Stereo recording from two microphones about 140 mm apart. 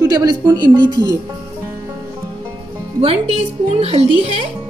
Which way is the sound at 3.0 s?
45° right (ahead or behind).